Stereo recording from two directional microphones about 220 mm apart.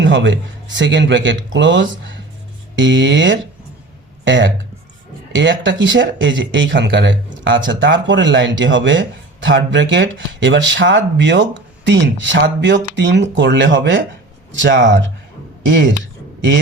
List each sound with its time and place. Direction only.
0.0 s speech: 55° right (ahead or behind)